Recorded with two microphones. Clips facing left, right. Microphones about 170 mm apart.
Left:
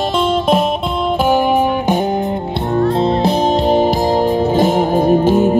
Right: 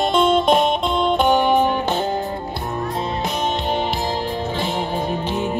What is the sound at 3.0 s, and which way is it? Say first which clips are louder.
Music: left 9 dB; 35° left (ahead or behind).